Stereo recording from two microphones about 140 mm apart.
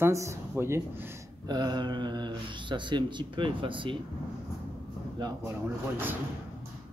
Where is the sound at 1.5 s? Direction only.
30° right (ahead or behind).